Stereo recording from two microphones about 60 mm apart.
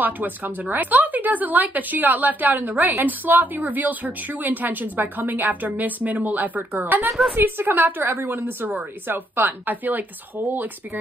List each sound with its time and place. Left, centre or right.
0.0 s speech: right
7.1 s a woman's voice: centre
7.3 s a woman's voice: right